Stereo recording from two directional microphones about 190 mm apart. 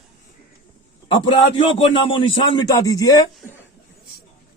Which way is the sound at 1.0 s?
25° left (ahead or behind).